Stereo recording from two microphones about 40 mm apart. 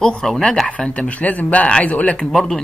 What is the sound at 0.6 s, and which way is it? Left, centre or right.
Speech, left.